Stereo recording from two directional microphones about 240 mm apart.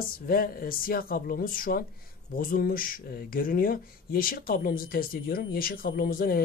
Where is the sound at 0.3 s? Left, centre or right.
Left.